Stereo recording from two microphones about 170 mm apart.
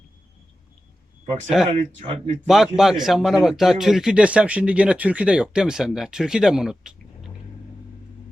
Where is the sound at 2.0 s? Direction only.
40° right (ahead or behind).